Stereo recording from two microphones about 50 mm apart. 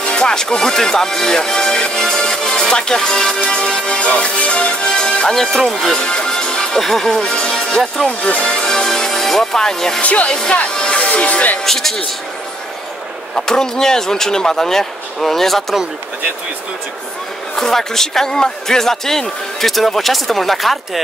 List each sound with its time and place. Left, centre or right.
0.1 s speech: centre
10.0 s speech: left
10.3 s speech: centre
10.7 s music: centre
11.6 s speech: centre
13.5 s speech: centre
17.6 s speech: centre